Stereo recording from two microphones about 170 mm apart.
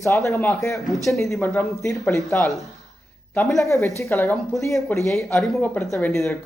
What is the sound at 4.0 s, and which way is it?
Speech, 15° left (ahead or behind).